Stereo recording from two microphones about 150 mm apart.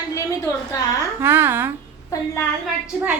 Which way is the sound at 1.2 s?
15° right (ahead or behind).